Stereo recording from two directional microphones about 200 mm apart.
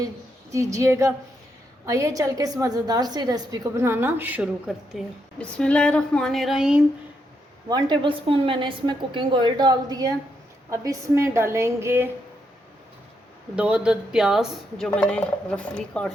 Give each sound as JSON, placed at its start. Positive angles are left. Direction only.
{"t": 0.5, "sound": "a woman's voice", "side_deg": -15}
{"t": 7.7, "sound": "a woman's voice", "side_deg": -25}
{"t": 13.6, "sound": "speech", "side_deg": -5}